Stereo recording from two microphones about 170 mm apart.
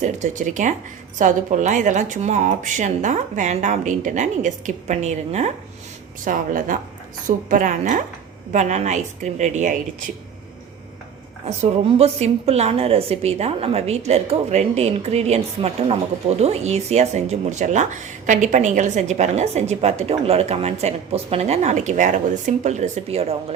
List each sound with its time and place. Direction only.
0.0 s a woman's voice: 45° right (ahead or behind)
6.2 s a woman's voice: 50° right (ahead or behind)
11.4 s speech: 40° right (ahead or behind)